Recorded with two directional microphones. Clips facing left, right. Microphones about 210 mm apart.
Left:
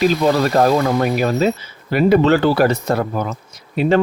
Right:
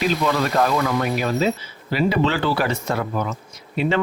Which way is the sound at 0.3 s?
35° left (ahead or behind).